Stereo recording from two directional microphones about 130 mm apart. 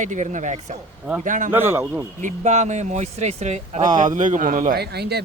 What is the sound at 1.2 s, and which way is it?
Speech, 90° right.